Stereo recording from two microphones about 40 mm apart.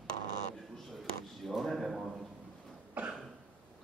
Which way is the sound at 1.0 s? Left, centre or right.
Centre.